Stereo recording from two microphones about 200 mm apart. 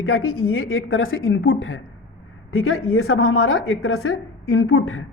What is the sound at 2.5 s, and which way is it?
A woman's voice, 90° left.